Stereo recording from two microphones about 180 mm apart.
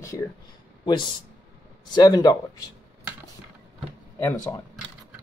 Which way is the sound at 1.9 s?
20° left (ahead or behind).